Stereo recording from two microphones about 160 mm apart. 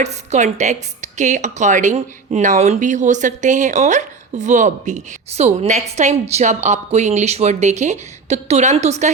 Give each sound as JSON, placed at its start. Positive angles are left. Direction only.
{"t": 0.0, "sound": "a woman's voice", "side_deg": -45}